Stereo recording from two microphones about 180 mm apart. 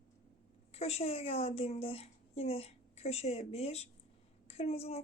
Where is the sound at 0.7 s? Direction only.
35° left (ahead or behind).